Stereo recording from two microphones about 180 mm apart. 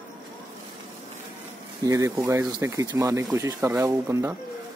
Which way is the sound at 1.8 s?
20° right (ahead or behind).